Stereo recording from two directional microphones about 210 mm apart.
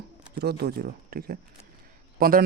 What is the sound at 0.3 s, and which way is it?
Speech, 45° right (ahead or behind).